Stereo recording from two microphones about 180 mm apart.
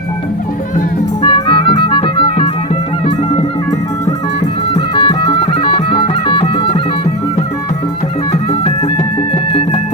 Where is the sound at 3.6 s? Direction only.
20° left (ahead or behind).